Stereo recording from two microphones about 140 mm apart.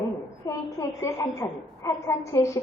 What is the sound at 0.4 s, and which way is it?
A woman's voice, 25° left (ahead or behind).